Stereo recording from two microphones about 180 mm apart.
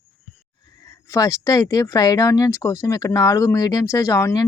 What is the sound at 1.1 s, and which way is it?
Speech, 15° left (ahead or behind).